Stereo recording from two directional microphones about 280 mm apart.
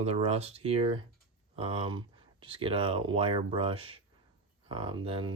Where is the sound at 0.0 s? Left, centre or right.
Right.